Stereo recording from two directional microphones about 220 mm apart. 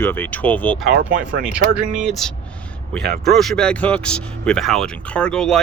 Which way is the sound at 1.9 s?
Centre (ahead or behind).